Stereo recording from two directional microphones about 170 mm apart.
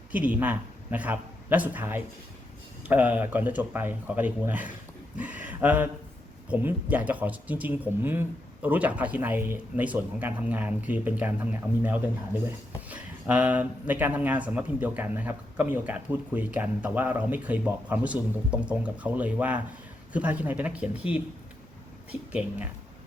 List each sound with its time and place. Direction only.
0.1 s a man's voice: 10° right (ahead or behind)